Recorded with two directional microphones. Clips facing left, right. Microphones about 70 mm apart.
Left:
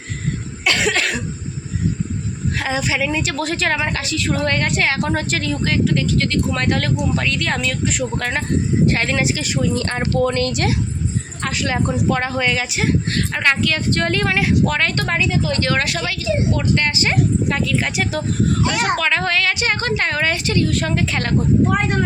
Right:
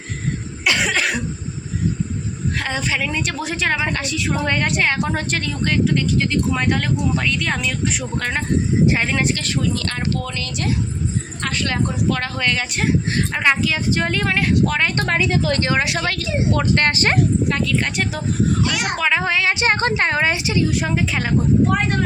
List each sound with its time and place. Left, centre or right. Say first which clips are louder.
0.6 s cough: left 1 dB; centre
2.6 s a woman's voice: left 3 dB; centre
9.7 s speech: left 4 dB; left
10.3 s a woman's voice: left 5 dB; left
11.4 s a woman's voice: left 2 dB; centre
13.1 s a woman's voice: even; centre
14.9 s speech: right 1 dB; right
15.3 s speech: right 1 dB; right
15.6 s speech: even; centre
16.0 s speech: left 1 dB; right
17.5 s a woman's voice: even; centre
19.5 s a woman's voice: right 2 dB; right; by 21.3 s centre